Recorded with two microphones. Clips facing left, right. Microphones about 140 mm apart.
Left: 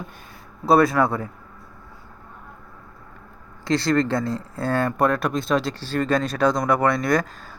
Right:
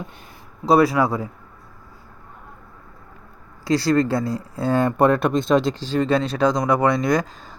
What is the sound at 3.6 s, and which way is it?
Speech, 10° right (ahead or behind).